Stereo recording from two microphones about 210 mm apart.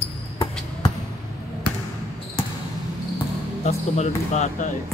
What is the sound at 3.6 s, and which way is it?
Speech, 35° left (ahead or behind).